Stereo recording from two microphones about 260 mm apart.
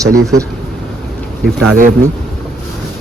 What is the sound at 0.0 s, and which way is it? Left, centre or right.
Speech, centre.